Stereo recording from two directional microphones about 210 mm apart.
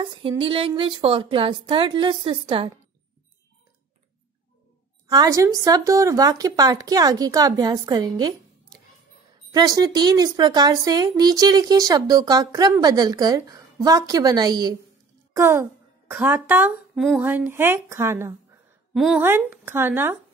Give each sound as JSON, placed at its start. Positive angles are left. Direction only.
{"t": 0.0, "sound": "a woman's voice", "side_deg": -25}
{"t": 5.1, "sound": "a woman's voice", "side_deg": -15}